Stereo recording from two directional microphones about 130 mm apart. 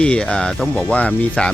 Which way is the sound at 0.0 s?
5° left (ahead or behind).